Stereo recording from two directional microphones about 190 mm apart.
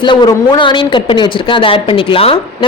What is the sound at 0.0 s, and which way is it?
Speech, 25° left (ahead or behind).